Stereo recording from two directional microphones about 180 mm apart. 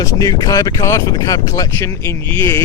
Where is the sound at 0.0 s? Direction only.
20° left (ahead or behind).